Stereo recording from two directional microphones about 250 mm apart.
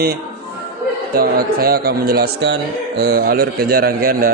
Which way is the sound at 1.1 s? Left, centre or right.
Right.